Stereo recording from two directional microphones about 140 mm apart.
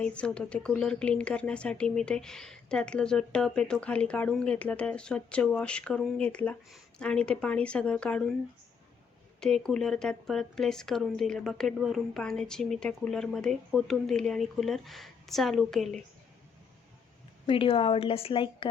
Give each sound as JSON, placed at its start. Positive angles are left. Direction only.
{"t": 0.0, "sound": "speech", "side_deg": 5}
{"t": 9.4, "sound": "speech", "side_deg": 5}
{"t": 17.4, "sound": "a woman's voice", "side_deg": 40}